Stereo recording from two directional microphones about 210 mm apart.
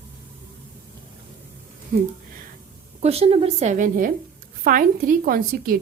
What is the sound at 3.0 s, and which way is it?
A woman's voice, 30° right (ahead or behind).